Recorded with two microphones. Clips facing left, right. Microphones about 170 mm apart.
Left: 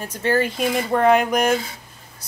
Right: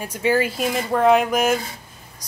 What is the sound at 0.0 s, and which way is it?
A woman's voice, 10° right (ahead or behind).